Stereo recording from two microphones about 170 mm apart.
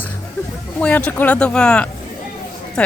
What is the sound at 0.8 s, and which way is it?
Speech, 10° left (ahead or behind).